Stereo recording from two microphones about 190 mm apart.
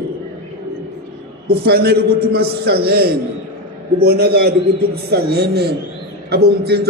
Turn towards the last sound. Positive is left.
turn(degrees=-55)  # may be behind; listen again after turning